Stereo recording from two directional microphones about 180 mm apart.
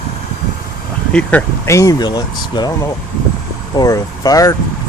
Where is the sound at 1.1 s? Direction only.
5° left (ahead or behind).